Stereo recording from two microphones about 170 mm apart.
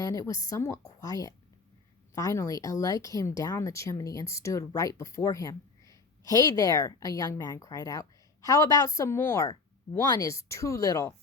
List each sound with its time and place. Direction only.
0.0 s speech: 20° left (ahead or behind)